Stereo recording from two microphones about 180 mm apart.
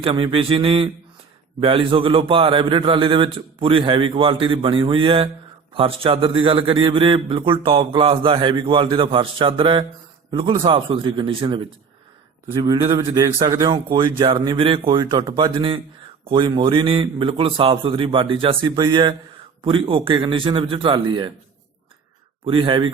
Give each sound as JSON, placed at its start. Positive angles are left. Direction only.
{"t": 0.0, "sound": "a man's voice", "side_deg": -30}
{"t": 22.4, "sound": "a man's voice", "side_deg": -30}